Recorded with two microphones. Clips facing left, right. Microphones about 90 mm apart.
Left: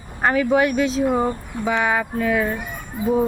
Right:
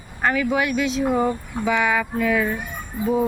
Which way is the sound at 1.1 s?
25° left (ahead or behind).